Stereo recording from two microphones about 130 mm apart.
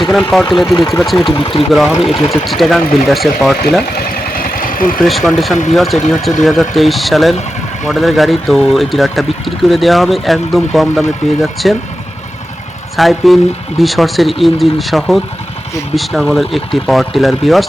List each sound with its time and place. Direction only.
0.0 s speech: centre (ahead or behind)
1.4 s speech: 40° left (ahead or behind)
1.7 s speech: centre (ahead or behind)
4.3 s vehicle: 90° left
4.9 s speech: centre (ahead or behind)
13.0 s speech: centre (ahead or behind)